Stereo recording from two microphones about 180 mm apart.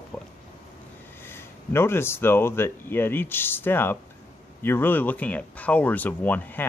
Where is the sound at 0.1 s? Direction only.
10° left (ahead or behind).